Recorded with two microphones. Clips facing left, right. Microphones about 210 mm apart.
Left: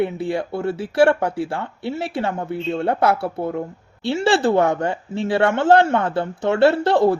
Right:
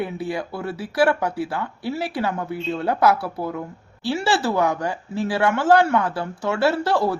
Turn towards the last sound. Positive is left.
turn(degrees=25)  # may be behind; listen again after turning